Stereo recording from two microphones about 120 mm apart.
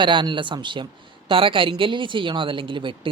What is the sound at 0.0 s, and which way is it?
Speech, 40° right (ahead or behind).